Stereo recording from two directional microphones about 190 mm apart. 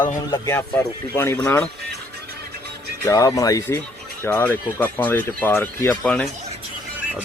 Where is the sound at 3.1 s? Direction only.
15° left (ahead or behind).